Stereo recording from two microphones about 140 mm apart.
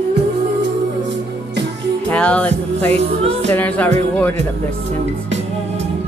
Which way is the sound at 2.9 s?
50° right (ahead or behind).